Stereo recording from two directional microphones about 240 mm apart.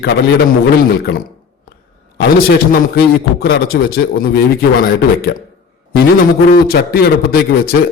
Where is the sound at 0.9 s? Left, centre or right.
Left.